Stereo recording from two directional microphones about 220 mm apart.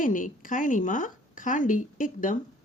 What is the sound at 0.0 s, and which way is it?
A woman's voice, 35° left (ahead or behind).